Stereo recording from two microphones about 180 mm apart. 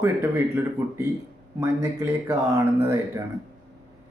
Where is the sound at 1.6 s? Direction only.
15° right (ahead or behind).